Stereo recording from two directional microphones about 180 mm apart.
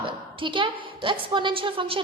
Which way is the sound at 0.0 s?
30° right (ahead or behind).